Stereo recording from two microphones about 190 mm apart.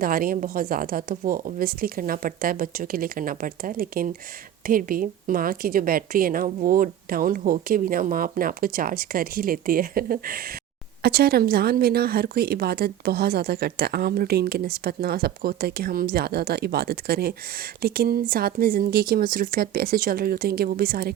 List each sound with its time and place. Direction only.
0.0 s a woman's voice: 50° right (ahead or behind)